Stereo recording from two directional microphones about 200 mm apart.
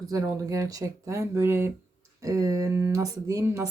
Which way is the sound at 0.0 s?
20° right (ahead or behind).